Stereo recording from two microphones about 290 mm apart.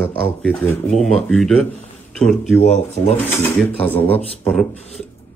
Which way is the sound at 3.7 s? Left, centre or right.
Centre.